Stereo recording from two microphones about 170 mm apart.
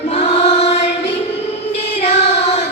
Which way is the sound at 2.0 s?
40° left (ahead or behind).